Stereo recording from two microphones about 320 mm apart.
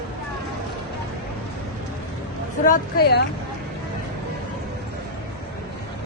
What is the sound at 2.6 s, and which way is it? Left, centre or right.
Speech, left.